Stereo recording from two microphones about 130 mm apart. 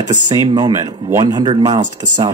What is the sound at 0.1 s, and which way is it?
Speech, 30° right (ahead or behind).